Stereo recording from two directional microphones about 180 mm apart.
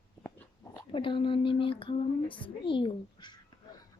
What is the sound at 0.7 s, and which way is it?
A woman's voice, 30° left (ahead or behind).